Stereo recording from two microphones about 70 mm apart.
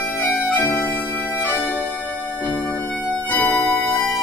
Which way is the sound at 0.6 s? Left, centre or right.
Left.